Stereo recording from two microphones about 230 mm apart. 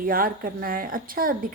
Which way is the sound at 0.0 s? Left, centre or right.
Right.